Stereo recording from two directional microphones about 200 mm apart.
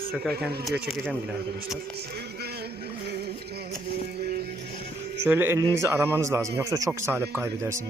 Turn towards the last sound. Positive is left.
turn(degrees=-15)  # may be behind; listen again after turning